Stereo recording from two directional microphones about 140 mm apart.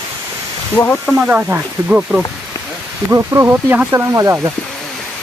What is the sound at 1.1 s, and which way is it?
Speech, 10° right (ahead or behind).